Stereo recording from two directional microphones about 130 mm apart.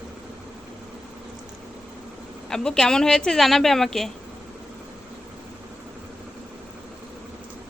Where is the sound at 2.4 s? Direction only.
5° left (ahead or behind).